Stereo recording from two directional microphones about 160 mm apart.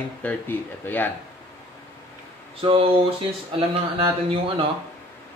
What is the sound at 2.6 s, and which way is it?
Speech, 35° right (ahead or behind).